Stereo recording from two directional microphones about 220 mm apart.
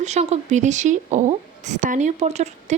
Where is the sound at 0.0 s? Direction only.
30° right (ahead or behind).